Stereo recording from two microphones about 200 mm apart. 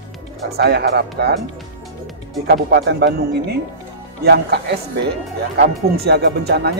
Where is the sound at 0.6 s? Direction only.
55° right (ahead or behind).